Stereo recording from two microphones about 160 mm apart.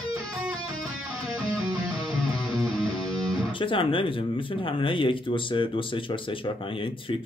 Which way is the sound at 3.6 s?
35° left (ahead or behind).